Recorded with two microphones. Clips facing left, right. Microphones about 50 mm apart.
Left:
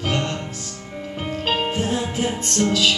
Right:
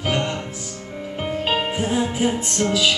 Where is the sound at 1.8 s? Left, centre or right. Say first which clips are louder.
Right 2 dB; centre.